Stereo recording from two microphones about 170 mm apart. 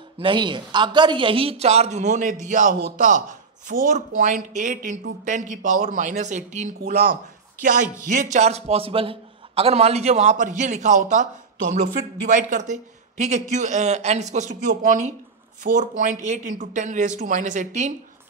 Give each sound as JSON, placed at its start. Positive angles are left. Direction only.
{"t": 0.2, "sound": "a man's voice", "side_deg": -30}